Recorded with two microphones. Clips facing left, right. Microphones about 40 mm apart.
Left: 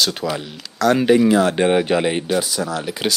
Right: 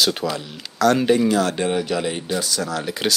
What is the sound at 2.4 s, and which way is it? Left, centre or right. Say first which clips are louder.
Speech: left 1 dB; centre.